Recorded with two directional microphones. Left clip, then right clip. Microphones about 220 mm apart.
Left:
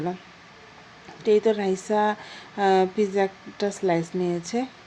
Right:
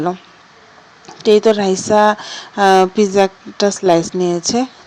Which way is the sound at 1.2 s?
20° right (ahead or behind).